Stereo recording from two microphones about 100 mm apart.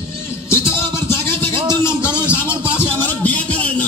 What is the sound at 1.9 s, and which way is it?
Speech, 25° left (ahead or behind).